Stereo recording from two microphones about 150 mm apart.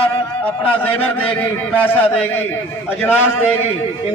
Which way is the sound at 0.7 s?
10° left (ahead or behind).